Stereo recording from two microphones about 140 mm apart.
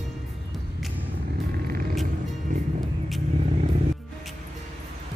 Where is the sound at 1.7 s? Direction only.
90° right.